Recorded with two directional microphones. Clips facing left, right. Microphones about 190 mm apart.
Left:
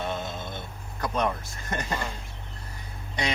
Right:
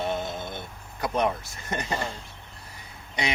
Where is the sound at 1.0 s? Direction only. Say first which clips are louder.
Right 2 dB; 15° right (ahead or behind).